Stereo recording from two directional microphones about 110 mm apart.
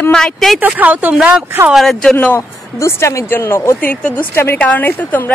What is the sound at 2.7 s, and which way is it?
A woman's voice, 25° left (ahead or behind).